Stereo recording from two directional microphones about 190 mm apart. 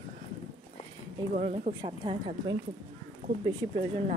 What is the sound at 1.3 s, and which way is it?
A woman's voice, 35° right (ahead or behind).